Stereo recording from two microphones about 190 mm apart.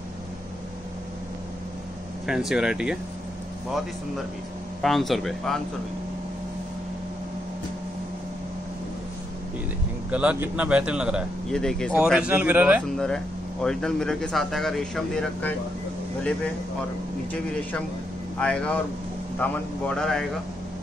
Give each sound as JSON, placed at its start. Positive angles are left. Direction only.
{"t": 2.2, "sound": "speech", "side_deg": -5}
{"t": 4.8, "sound": "speech", "side_deg": 0}
{"t": 10.1, "sound": "a man's voice", "side_deg": -5}
{"t": 12.9, "sound": "speech", "side_deg": 5}
{"t": 18.4, "sound": "speech", "side_deg": 5}